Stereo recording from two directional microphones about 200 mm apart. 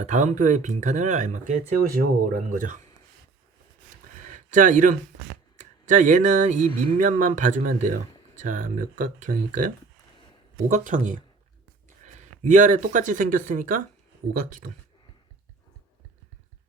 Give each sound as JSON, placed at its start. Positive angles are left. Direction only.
{"t": 0.0, "sound": "speech", "side_deg": -35}
{"t": 4.4, "sound": "speech", "side_deg": -40}